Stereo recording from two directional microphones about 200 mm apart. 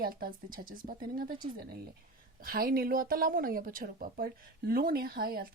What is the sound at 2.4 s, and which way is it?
Speech, 50° right (ahead or behind).